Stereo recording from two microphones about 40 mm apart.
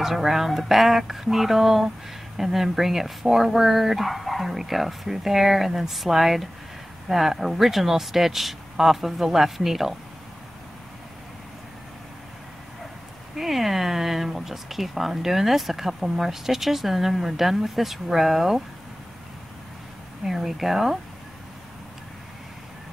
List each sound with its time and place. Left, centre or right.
0.0 s speech: centre
13.4 s speech: centre
20.2 s speech: centre